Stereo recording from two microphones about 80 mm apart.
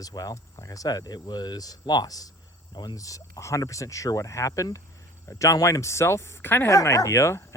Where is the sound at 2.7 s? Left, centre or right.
Left.